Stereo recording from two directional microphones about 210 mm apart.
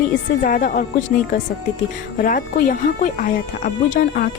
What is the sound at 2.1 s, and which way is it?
Speech, 40° left (ahead or behind).